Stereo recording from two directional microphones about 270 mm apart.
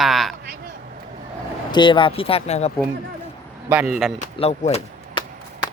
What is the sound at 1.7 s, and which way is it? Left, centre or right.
Speech, centre.